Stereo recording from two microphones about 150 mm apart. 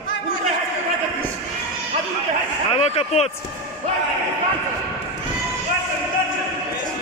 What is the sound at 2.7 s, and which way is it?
Speech, 40° left (ahead or behind).